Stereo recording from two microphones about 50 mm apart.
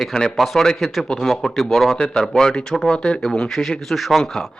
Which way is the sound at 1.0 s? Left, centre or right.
Centre.